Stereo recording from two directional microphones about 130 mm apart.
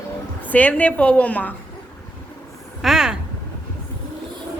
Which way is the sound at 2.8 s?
5° right (ahead or behind).